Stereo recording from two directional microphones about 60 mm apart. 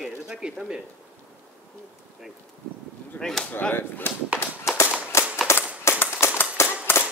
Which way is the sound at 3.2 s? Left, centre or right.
Centre.